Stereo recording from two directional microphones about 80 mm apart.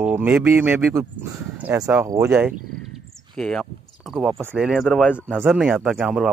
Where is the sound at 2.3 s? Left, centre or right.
Centre.